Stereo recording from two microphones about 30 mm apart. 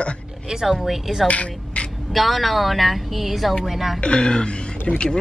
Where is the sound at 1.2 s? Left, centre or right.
Left.